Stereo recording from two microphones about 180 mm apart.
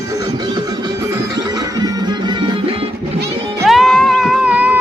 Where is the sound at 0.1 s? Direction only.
20° right (ahead or behind).